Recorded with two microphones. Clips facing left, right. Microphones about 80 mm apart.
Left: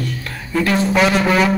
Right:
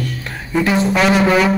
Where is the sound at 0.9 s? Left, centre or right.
Centre.